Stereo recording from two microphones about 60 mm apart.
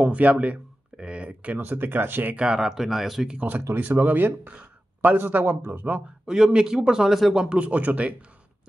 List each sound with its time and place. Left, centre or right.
0.0 s a sound: right
1.6 s speech: right
2.3 s speech: centre
3.8 s speech: right
6.2 s speech: centre